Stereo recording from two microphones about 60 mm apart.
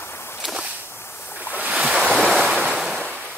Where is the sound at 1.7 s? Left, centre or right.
Centre.